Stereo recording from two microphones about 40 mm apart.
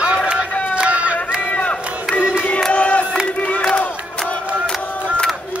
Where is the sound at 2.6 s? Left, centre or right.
Centre.